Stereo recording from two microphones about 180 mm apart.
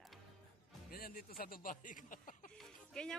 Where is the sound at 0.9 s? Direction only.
55° left (ahead or behind).